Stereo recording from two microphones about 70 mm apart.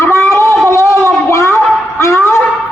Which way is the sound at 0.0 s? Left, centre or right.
Left.